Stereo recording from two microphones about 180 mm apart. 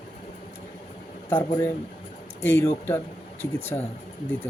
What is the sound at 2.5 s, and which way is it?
Speech, 15° left (ahead or behind).